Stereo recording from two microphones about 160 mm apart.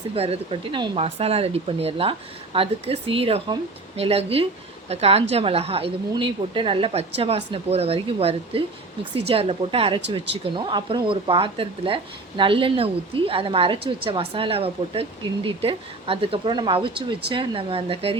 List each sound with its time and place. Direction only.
0.1 s speech: 35° right (ahead or behind)